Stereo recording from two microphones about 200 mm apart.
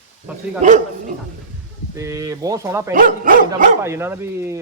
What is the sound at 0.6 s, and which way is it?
Speech, 35° right (ahead or behind).